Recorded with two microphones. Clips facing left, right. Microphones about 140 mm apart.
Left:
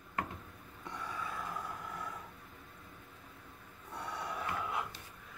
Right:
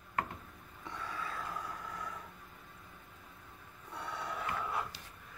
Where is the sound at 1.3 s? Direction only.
5° left (ahead or behind).